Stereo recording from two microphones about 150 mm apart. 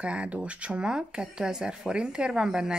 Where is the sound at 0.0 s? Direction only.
10° right (ahead or behind).